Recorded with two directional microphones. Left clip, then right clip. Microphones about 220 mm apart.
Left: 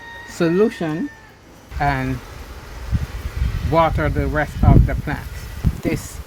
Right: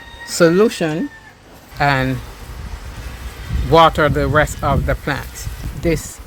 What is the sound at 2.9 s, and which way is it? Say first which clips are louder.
Vehicle: left 6 dB; 50° left (ahead or behind).